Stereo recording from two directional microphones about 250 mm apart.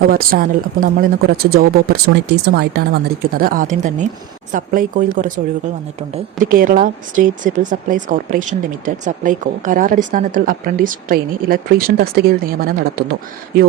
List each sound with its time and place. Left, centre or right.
0.1 s a woman's voice: right